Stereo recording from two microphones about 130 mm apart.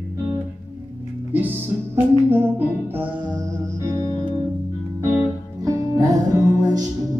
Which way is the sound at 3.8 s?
20° right (ahead or behind).